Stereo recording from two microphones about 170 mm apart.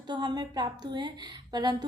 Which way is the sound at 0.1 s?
25° right (ahead or behind).